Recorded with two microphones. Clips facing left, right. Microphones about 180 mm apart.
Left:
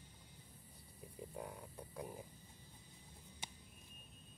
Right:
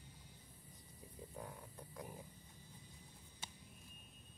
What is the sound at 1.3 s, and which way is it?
Frog, 15° left (ahead or behind).